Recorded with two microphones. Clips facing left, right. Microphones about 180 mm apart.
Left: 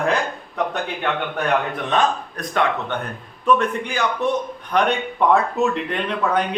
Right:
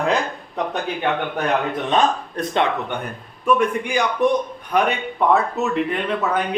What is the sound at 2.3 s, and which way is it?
Speech, 25° right (ahead or behind).